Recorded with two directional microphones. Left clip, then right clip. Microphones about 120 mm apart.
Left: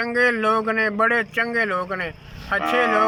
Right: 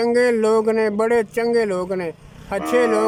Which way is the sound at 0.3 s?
40° right (ahead or behind).